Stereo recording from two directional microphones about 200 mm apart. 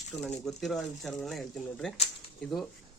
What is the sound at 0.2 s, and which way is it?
Speech, centre (ahead or behind).